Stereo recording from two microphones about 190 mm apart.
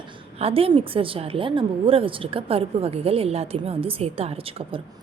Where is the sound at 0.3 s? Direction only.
30° right (ahead or behind).